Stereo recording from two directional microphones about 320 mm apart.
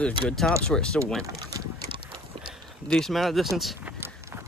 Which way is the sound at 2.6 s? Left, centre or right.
Centre.